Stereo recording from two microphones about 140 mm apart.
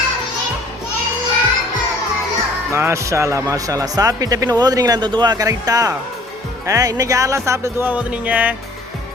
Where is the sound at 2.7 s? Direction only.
20° right (ahead or behind).